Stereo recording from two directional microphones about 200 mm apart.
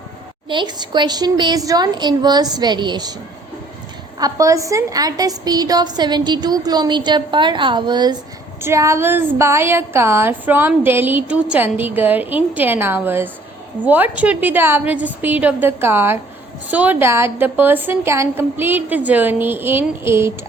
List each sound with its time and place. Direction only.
0.4 s a woman's voice: 25° right (ahead or behind)
4.2 s a woman's voice: 15° right (ahead or behind)